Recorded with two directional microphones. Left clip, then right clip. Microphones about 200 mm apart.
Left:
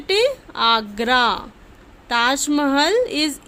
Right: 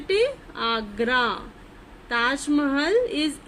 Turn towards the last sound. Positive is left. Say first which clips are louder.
# left 4 dB
turn(degrees=50)  # may be behind; listen again after turning